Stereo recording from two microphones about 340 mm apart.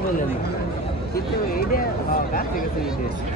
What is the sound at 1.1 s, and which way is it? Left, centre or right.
Speech, left.